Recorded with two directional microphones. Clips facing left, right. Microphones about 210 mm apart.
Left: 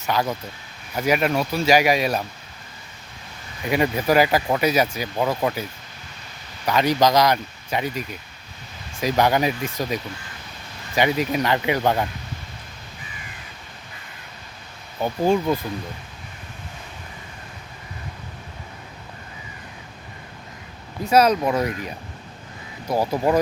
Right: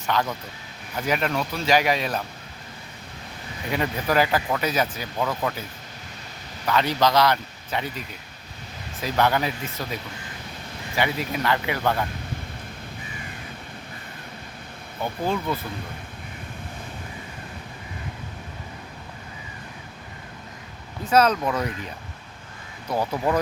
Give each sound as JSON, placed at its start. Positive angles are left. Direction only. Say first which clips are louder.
{"t": 0.0, "sound": "speech", "louder": "left 2 dB", "side_deg": 10}
{"t": 3.7, "sound": "speech", "louder": "left 5 dB", "side_deg": 10}
{"t": 6.7, "sound": "speech", "louder": "left 3 dB", "side_deg": 15}
{"t": 15.3, "sound": "speech", "louder": "left 7 dB", "side_deg": 15}
{"t": 21.0, "sound": "speech", "louder": "left 3 dB", "side_deg": 10}